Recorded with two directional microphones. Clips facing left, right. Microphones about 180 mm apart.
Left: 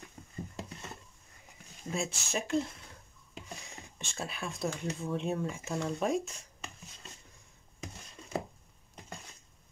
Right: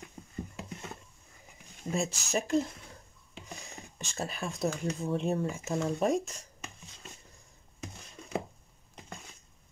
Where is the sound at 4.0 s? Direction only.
40° right (ahead or behind).